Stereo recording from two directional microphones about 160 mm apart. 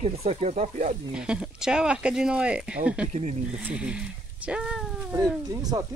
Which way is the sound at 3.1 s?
45° right (ahead or behind).